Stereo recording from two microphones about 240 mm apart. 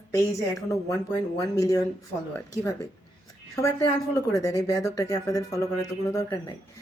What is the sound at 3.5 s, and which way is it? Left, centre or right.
A woman's voice, centre.